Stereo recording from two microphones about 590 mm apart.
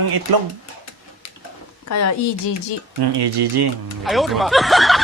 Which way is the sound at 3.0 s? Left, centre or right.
Right.